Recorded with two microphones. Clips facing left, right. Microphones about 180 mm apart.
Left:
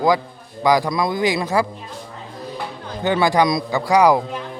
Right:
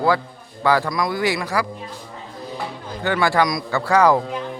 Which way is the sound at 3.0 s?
20° left (ahead or behind).